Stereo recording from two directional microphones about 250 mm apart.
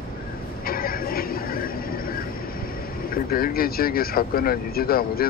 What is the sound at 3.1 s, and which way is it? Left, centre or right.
Speech, left.